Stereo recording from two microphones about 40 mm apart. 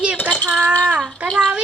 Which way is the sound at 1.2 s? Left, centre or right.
Right.